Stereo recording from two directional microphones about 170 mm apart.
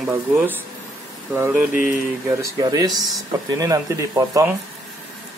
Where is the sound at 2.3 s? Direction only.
20° right (ahead or behind).